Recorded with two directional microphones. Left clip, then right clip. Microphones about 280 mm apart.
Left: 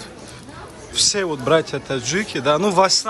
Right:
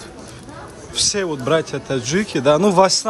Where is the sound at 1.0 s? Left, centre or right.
Centre.